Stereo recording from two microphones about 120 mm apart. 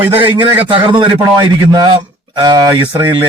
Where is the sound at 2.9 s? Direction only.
15° right (ahead or behind).